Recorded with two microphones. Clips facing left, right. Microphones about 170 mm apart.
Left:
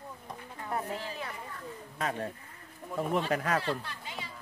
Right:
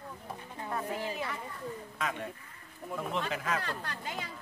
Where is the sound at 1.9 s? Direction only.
35° left (ahead or behind).